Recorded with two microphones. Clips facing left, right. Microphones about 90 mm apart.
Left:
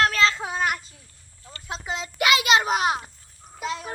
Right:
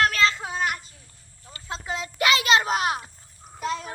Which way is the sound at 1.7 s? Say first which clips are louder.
Even; 20° left (ahead or behind).